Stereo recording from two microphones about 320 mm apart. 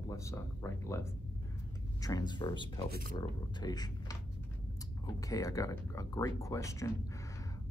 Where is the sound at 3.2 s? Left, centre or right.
Centre.